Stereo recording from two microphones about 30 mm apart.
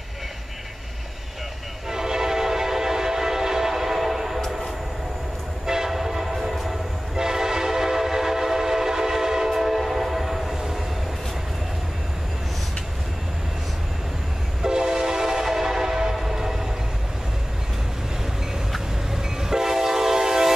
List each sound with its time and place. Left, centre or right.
1.9 s train: centre
5.9 s train: centre
14.6 s train: right
19.5 s train: centre